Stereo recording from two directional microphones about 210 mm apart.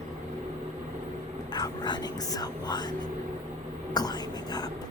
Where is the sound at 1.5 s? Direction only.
20° left (ahead or behind).